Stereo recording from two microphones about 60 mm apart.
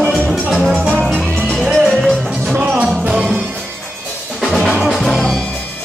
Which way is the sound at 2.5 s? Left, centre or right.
Centre.